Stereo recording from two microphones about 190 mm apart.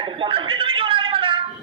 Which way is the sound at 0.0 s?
25° right (ahead or behind).